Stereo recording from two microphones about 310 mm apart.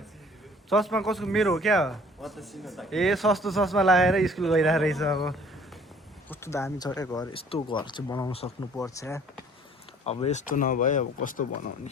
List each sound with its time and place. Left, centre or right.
0.7 s a man's voice: centre
10.1 s speech: left